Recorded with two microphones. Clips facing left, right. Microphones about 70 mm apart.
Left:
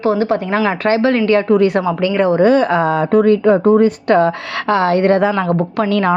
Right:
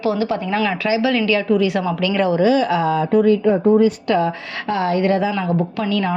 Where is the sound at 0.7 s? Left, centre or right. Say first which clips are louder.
Left 6 dB; left.